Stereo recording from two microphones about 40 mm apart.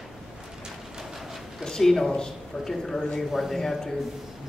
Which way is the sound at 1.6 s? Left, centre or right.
Centre.